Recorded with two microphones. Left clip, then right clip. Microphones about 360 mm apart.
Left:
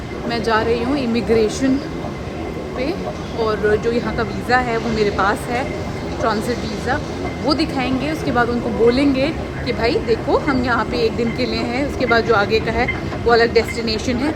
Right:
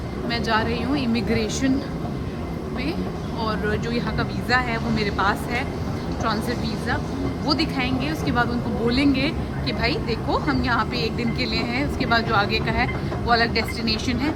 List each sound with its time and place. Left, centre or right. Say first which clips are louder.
0.3 s speech: left 6 dB; centre
3.4 s speech: left 9 dB; centre
7.4 s speech: left 5 dB; centre